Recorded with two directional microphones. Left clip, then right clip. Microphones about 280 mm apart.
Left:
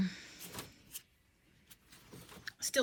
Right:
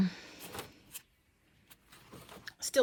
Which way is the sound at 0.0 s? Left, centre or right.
Centre.